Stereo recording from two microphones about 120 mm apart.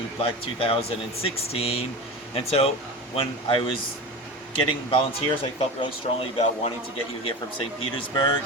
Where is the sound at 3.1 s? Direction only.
45° left (ahead or behind).